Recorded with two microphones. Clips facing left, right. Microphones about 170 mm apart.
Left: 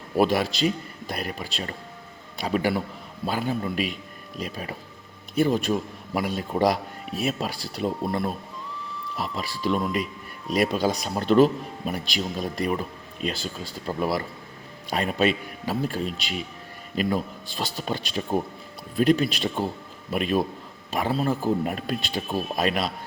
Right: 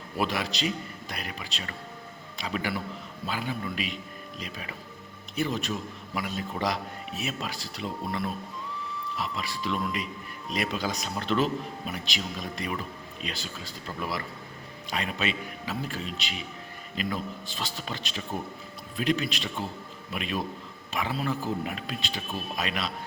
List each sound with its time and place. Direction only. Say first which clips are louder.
0.2 s a man's voice: left 8 dB; 45° left (ahead or behind)
6.5 s speech: left 9 dB; 35° left (ahead or behind)
7.3 s speech: left 8 dB; 45° left (ahead or behind)
11.1 s speech: left 9 dB; 45° left (ahead or behind)
17.7 s speech: left 7 dB; 40° left (ahead or behind)